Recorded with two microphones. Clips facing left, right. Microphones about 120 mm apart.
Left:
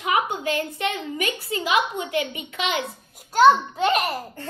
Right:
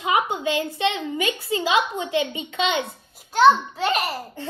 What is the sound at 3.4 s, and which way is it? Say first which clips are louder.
Speech: even; 5° left (ahead or behind).